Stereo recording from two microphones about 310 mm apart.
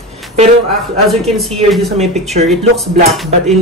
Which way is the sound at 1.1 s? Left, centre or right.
Centre.